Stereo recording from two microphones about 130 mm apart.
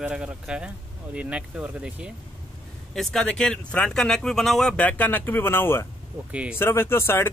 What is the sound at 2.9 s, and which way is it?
Speech, 5° left (ahead or behind).